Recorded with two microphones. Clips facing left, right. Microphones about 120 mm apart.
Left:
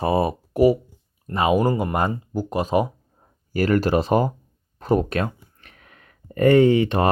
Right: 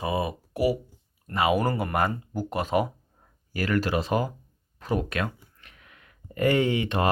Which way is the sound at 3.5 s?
35° left (ahead or behind).